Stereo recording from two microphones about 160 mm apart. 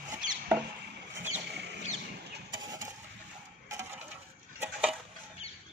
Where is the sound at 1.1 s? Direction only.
10° right (ahead or behind).